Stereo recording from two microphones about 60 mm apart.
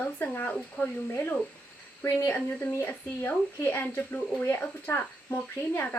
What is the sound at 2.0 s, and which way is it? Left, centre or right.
Speech, left.